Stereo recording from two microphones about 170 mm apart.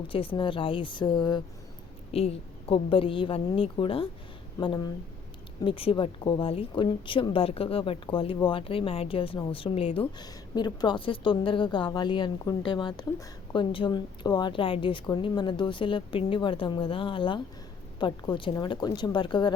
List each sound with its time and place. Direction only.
0.1 s a woman's voice: 30° left (ahead or behind)